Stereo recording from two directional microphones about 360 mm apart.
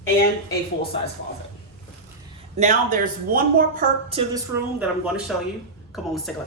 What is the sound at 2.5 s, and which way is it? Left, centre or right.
A woman's voice, centre.